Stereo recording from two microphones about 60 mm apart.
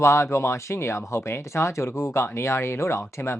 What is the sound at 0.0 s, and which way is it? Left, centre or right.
Speech, left.